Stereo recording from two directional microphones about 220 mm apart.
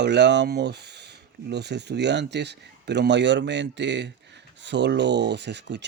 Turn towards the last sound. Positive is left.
turn(degrees=-50)  # may be behind; listen again after turning